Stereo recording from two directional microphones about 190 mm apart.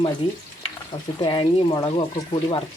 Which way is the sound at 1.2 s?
25° left (ahead or behind).